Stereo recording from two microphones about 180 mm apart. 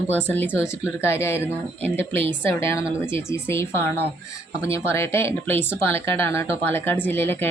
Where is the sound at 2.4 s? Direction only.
15° left (ahead or behind).